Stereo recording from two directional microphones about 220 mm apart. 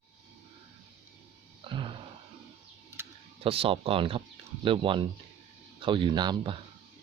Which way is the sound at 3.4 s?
25° right (ahead or behind).